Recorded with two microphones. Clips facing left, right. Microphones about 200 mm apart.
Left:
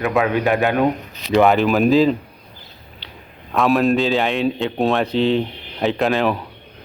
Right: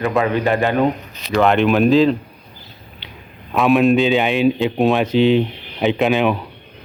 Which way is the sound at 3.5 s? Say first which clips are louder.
Right 3 dB; centre (ahead or behind).